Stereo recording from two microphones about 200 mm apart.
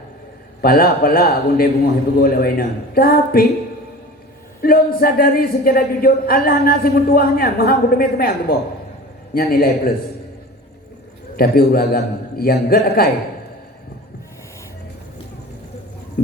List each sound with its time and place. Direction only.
0.6 s speech: 50° left (ahead or behind)
4.6 s speech: 45° left (ahead or behind)
11.3 s speech: 50° left (ahead or behind)